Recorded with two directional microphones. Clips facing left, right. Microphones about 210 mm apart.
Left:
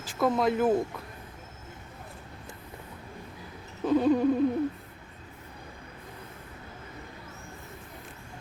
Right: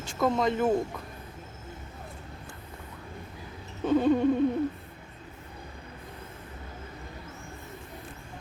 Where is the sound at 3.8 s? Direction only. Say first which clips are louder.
Even; centre (ahead or behind).